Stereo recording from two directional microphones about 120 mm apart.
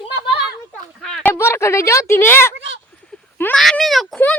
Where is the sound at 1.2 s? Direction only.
20° left (ahead or behind).